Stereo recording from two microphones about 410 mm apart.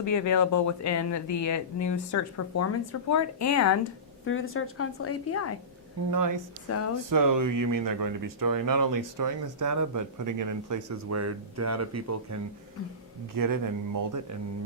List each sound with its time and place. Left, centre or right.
0.0 s a woman's voice: left
4.3 s a woman's voice: left
6.1 s speech: right
6.7 s a woman's voice: left
7.1 s speech: right
13.3 s speech: right